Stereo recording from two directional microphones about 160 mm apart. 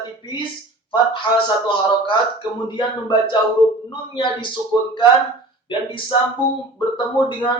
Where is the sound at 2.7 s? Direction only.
30° left (ahead or behind).